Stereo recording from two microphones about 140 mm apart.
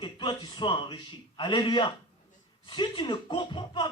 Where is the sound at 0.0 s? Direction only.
35° left (ahead or behind).